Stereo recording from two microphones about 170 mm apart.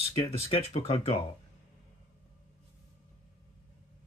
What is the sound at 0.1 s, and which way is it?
Speech, 35° left (ahead or behind).